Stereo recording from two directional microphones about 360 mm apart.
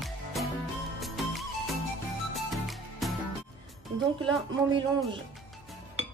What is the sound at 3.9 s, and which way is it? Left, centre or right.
Music, centre.